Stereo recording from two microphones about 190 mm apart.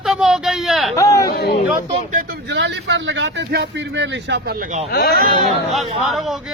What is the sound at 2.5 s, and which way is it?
Speech, 70° right (ahead or behind).